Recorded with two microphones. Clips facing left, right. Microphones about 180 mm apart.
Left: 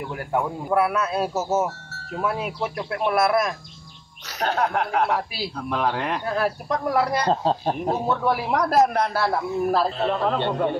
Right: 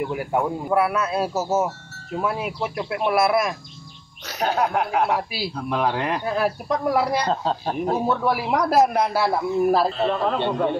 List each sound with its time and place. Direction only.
0.1 s speech: 10° right (ahead or behind)
7.2 s speech: 35° left (ahead or behind)
8.1 s speech: 5° right (ahead or behind)